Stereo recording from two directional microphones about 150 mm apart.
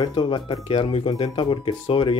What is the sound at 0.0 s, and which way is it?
Speech, 35° left (ahead or behind).